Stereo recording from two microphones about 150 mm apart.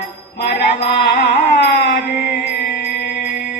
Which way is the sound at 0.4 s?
90° left.